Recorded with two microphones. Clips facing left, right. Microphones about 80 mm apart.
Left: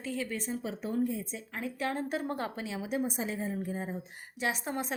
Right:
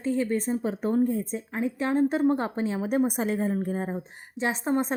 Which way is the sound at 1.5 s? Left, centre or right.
Right.